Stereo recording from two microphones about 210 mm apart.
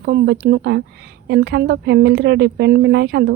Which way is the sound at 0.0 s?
50° right (ahead or behind).